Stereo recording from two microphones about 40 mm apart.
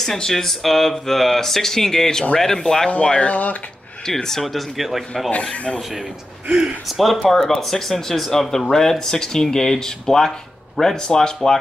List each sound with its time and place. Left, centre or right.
0.0 s speech: centre
3.1 s speech: left
4.0 s speech: centre
5.4 s speech: left
6.9 s speech: centre